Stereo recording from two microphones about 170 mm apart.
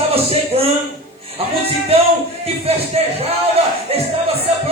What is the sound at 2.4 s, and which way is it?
Speech, 35° right (ahead or behind).